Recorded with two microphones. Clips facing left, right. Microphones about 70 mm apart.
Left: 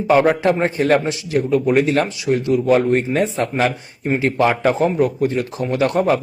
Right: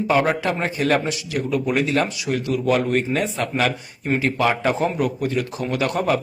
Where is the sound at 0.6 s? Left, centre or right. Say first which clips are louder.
Left 4 dB; left.